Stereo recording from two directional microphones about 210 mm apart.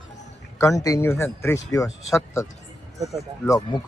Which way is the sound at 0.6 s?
15° left (ahead or behind).